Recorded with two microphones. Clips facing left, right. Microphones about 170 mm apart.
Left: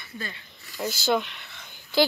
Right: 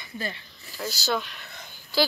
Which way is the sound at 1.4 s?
40° right (ahead or behind).